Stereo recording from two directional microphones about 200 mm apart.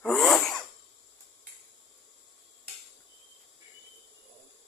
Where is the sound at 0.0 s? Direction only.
Centre (ahead or behind).